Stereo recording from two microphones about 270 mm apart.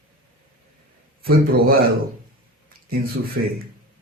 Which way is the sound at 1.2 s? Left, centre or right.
Right.